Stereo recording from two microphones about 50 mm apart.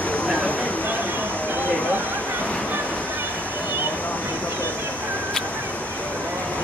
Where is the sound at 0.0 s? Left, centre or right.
Left.